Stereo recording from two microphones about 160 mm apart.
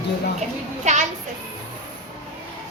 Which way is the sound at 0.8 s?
45° right (ahead or behind).